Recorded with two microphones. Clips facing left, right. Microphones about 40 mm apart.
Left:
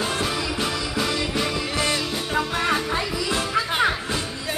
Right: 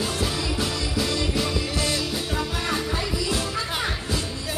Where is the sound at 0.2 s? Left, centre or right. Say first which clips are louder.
Left 1 dB; centre.